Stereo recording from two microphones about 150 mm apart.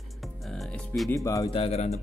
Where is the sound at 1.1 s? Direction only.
20° left (ahead or behind).